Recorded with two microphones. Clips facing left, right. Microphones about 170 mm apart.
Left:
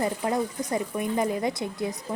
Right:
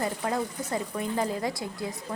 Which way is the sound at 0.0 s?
20° left (ahead or behind).